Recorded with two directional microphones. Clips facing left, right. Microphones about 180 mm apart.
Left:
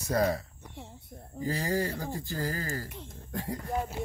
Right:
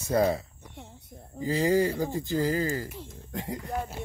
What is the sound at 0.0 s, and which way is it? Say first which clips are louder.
Speech: right 3 dB; 25° right (ahead or behind).